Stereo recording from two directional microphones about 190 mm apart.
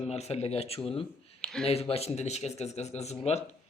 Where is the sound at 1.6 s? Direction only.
30° left (ahead or behind).